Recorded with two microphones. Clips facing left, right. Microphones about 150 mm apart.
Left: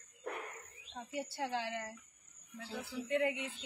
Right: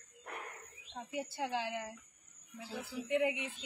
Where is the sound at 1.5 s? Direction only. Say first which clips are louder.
Right 1 dB; 10° right (ahead or behind).